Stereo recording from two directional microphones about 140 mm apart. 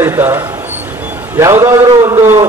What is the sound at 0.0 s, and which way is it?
Speech, 20° right (ahead or behind).